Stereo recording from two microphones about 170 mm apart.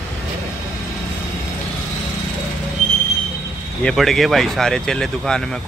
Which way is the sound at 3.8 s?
5° left (ahead or behind).